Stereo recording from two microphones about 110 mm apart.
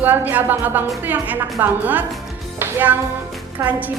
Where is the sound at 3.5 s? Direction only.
15° right (ahead or behind).